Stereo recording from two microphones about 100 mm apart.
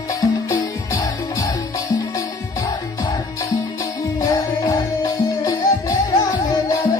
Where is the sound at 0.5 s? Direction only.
30° left (ahead or behind).